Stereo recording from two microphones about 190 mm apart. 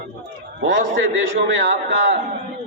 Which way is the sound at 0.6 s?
70° right (ahead or behind).